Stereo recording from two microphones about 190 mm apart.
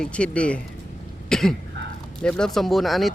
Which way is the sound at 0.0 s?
5° left (ahead or behind).